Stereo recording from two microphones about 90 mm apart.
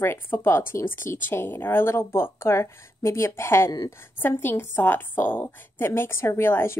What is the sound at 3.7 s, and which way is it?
Speech, 45° left (ahead or behind).